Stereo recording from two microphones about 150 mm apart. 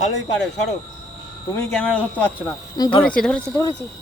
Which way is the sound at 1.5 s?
5° left (ahead or behind).